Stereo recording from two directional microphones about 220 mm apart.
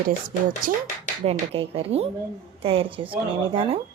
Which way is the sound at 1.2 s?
25° right (ahead or behind).